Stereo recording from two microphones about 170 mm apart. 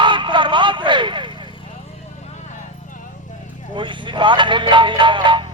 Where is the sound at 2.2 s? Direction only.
40° left (ahead or behind).